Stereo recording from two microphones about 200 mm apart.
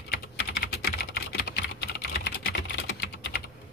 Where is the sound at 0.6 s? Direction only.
55° left (ahead or behind).